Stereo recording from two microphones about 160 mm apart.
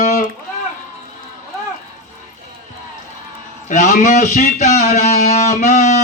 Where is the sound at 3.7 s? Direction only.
50° left (ahead or behind).